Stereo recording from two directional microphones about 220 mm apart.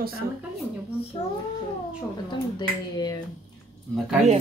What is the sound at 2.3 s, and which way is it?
Speech, 20° left (ahead or behind).